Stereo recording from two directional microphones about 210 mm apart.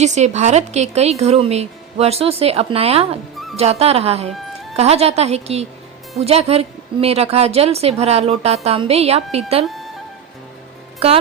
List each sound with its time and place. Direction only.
0.0 s speech: 35° right (ahead or behind)
9.6 s music: centre (ahead or behind)
11.0 s speech: 25° right (ahead or behind)